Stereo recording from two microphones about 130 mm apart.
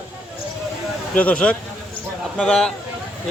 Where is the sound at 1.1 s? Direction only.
10° left (ahead or behind).